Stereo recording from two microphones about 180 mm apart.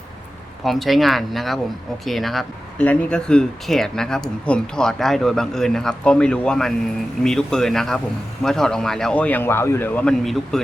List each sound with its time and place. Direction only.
0.6 s speech: centre (ahead or behind)